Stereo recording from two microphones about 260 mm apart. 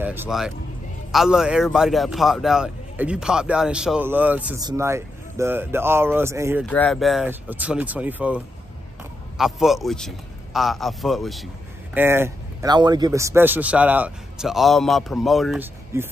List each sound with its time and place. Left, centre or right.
0.0 s speech: centre
6.6 s speech: centre
9.4 s speech: centre